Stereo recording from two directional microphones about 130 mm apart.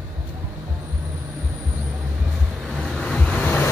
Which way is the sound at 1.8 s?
10° right (ahead or behind).